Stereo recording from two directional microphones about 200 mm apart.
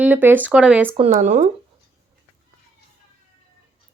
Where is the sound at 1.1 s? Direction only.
40° right (ahead or behind).